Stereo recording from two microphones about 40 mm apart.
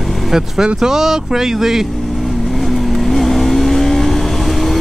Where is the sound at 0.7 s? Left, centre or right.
Centre.